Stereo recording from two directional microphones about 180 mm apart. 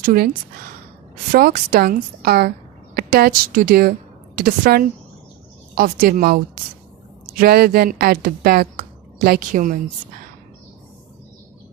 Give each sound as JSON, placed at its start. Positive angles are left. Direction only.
{"t": 0.0, "sound": "a woman's voice", "side_deg": -50}
{"t": 1.3, "sound": "a woman's voice", "side_deg": -55}